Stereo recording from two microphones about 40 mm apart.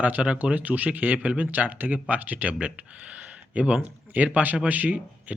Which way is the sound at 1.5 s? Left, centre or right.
Right.